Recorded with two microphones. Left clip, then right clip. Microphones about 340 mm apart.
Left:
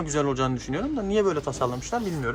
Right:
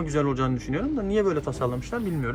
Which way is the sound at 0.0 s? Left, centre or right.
Centre.